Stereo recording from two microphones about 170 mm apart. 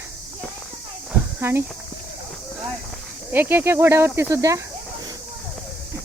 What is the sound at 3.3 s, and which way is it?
Speech, 10° right (ahead or behind).